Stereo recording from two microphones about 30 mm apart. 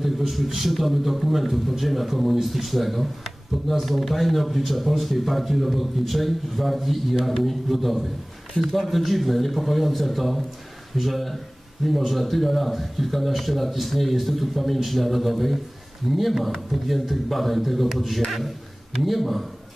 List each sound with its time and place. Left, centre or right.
0.0 s a man's voice: centre